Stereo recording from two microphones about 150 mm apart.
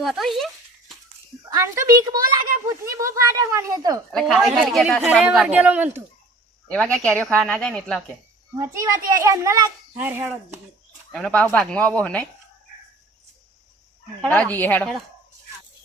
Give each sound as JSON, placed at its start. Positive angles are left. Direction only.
{"t": 0.0, "sound": "a sound", "side_deg": 0}
{"t": 1.5, "sound": "a woman's voice", "side_deg": -20}
{"t": 4.1, "sound": "a woman's voice", "side_deg": 0}
{"t": 6.7, "sound": "speech", "side_deg": 5}
{"t": 8.5, "sound": "speech", "side_deg": -20}
{"t": 11.1, "sound": "speech", "side_deg": 5}
{"t": 14.2, "sound": "speech", "side_deg": 10}